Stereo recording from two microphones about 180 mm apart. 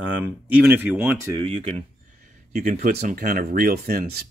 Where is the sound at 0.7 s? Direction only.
10° right (ahead or behind).